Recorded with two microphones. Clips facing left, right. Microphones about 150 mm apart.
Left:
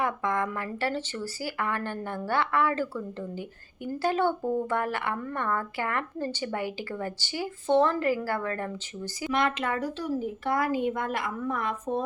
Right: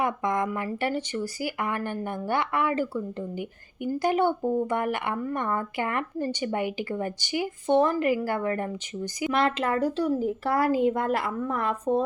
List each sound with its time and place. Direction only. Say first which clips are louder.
0.0 s speech: right 2 dB; 15° right (ahead or behind)
9.3 s a woman's voice: right 2 dB; 30° right (ahead or behind)